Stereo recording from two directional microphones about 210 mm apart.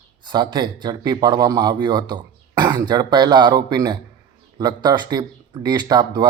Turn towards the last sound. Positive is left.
turn(degrees=-20)  # may be behind; listen again after turning